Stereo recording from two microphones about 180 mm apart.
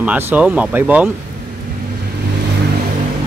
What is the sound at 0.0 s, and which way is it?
Speech, 10° right (ahead or behind).